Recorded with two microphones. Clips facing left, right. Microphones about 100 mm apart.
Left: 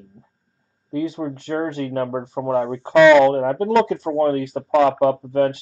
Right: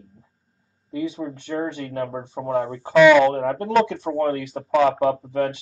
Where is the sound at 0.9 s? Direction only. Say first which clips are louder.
Left 3 dB; 45° left (ahead or behind).